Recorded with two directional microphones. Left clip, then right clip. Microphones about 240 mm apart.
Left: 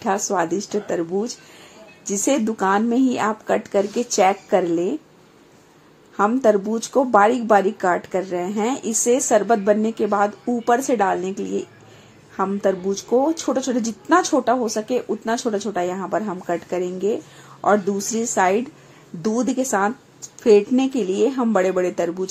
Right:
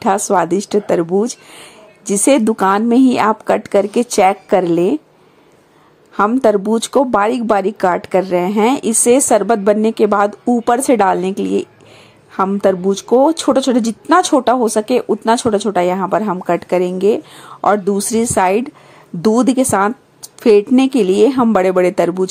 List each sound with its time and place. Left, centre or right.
0.0 s a woman's voice: right
6.1 s a woman's voice: right